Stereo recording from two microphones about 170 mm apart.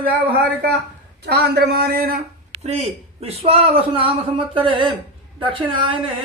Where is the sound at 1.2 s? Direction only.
75° right (ahead or behind).